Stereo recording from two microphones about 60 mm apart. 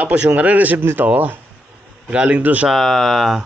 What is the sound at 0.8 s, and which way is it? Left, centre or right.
Speech, right.